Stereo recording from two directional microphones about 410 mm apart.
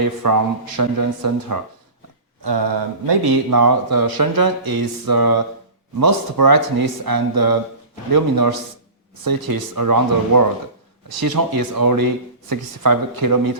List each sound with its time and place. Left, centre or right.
0.2 s speech: right
2.4 s mantra: right
3.5 s speech: right